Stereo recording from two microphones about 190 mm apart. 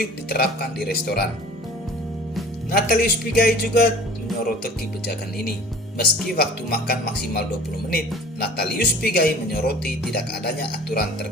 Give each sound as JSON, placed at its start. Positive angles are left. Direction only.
{"t": 0.0, "sound": "speech", "side_deg": 55}
{"t": 2.7, "sound": "speech", "side_deg": 50}